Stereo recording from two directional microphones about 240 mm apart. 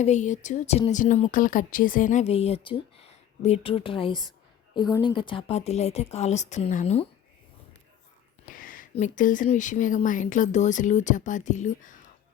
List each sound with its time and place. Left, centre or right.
0.0 s speech: left
8.4 s speech: left